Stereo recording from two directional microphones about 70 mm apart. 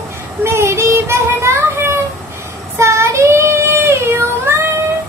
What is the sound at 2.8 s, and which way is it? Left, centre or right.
Child singing, right.